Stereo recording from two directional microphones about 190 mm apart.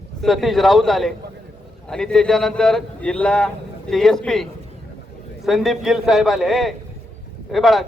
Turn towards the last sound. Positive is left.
turn(degrees=0)  # may be behind; listen again after turning